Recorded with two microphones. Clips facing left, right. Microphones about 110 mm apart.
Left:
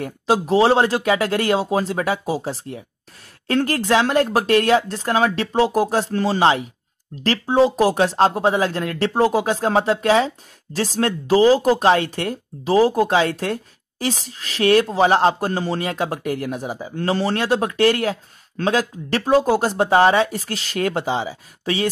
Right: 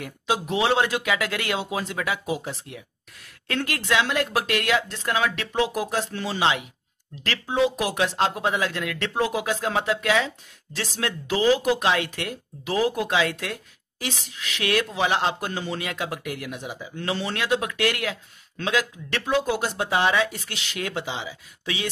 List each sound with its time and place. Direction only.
0.0 s speech: 35° left (ahead or behind)